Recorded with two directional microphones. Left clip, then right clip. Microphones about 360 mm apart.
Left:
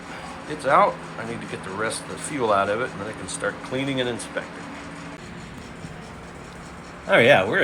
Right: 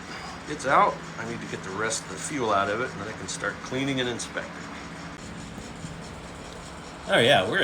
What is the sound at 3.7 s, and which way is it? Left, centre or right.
Speech, left.